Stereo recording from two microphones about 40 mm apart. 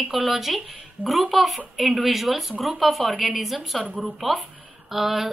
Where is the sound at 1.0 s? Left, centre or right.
Left.